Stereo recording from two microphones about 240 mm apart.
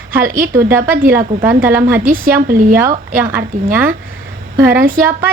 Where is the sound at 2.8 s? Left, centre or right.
Centre.